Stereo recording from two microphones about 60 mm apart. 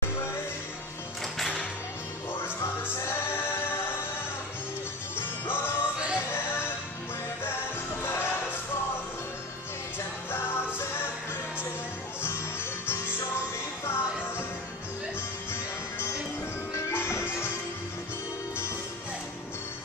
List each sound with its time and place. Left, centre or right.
2.3 s music: left
5.1 s music: left
8.0 s music: left
10.3 s music: left
12.2 s music: left
15.5 s music: left